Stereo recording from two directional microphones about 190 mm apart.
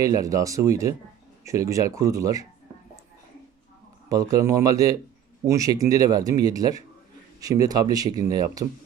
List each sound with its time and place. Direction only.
0.0 s speech: 15° right (ahead or behind)
4.1 s speech: 20° right (ahead or behind)